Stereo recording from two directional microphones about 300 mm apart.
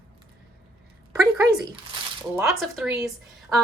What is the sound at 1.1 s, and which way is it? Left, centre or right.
A woman's voice, centre.